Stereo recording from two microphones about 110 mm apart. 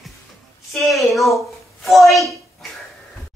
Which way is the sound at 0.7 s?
Centre (ahead or behind).